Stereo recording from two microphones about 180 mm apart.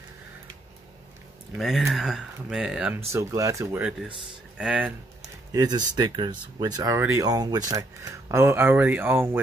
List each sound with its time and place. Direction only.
1.6 s speech: centre (ahead or behind)
3.1 s speech: 15° right (ahead or behind)
5.5 s speech: 20° right (ahead or behind)